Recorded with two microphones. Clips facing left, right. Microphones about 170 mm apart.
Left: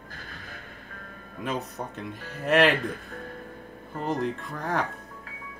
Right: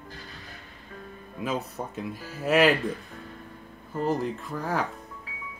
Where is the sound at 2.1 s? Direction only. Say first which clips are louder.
Right 1 dB; 60° left (ahead or behind).